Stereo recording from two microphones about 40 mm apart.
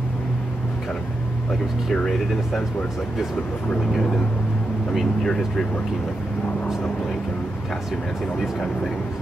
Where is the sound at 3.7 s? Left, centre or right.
Left.